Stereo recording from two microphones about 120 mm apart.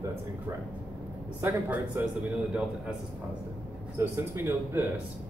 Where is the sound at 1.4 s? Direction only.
20° right (ahead or behind).